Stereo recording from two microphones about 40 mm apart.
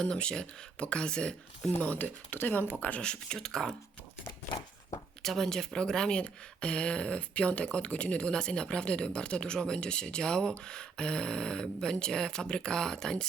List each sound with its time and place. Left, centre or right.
0.0 s speech: left
2.0 s speech: left
3.0 s speech: left
5.2 s speech: centre
5.5 s speech: centre